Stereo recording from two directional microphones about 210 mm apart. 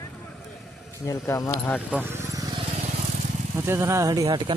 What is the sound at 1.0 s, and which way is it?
Speech, 15° left (ahead or behind).